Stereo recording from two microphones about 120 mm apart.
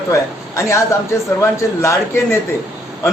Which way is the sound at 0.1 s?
25° left (ahead or behind).